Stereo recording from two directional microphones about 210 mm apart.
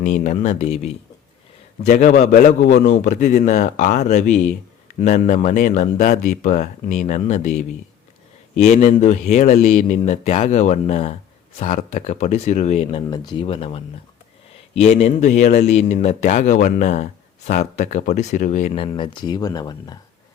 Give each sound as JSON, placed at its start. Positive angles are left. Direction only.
{"t": 0.0, "sound": "speech", "side_deg": 35}